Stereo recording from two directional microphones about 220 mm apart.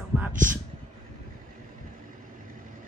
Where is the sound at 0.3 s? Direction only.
35° right (ahead or behind).